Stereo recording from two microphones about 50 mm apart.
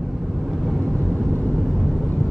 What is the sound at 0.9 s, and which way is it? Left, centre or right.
Vehicle, left.